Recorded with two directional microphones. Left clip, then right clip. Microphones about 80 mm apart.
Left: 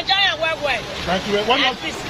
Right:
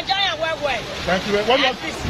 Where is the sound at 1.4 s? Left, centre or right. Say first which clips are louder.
Even; right.